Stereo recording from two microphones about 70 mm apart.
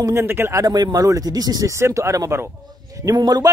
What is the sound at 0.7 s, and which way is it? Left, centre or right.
Speech, right.